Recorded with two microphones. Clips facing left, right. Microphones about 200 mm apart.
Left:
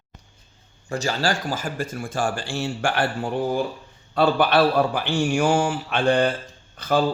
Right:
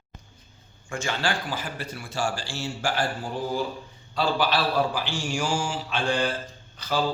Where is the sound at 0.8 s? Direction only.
40° left (ahead or behind).